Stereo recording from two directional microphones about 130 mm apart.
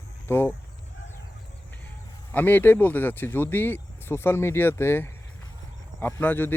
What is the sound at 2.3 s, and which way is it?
Speech, 15° left (ahead or behind).